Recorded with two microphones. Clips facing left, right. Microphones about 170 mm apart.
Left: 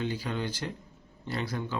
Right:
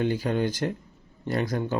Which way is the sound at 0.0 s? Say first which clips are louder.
Right 7 dB; 50° right (ahead or behind).